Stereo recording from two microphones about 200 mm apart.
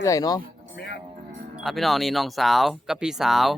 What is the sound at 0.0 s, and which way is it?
Speech, 15° left (ahead or behind).